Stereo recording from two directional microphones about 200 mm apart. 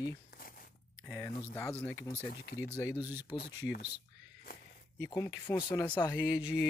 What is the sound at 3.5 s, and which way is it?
Speech, 55° left (ahead or behind).